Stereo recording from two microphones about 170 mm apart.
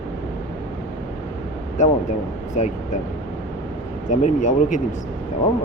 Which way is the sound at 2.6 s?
45° left (ahead or behind).